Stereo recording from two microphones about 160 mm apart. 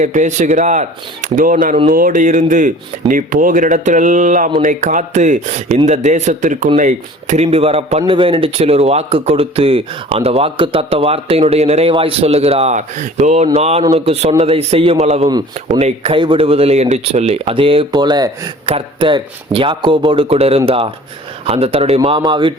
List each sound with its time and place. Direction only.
0.0 s speech: 50° right (ahead or behind)
15.3 s speech: 25° right (ahead or behind)
15.8 s speech: 45° right (ahead or behind)